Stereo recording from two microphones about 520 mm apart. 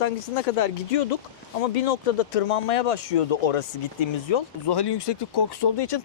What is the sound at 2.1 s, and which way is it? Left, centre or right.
Speech, left.